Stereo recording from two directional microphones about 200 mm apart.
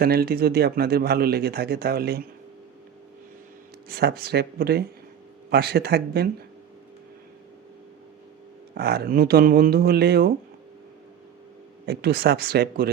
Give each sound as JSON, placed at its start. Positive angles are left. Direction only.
{"t": 0.0, "sound": "speech", "side_deg": -50}
{"t": 3.8, "sound": "speech", "side_deg": -50}
{"t": 8.7, "sound": "speech", "side_deg": -55}
{"t": 11.9, "sound": "speech", "side_deg": -50}